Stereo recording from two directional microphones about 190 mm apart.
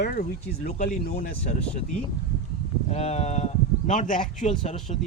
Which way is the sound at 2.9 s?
35° left (ahead or behind).